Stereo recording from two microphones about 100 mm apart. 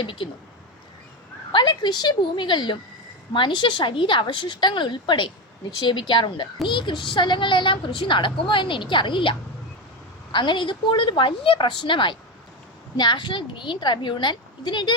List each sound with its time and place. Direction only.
0.0 s a woman's voice: 55° left (ahead or behind)
1.5 s a woman's voice: 45° left (ahead or behind)
10.3 s a woman's voice: 50° left (ahead or behind)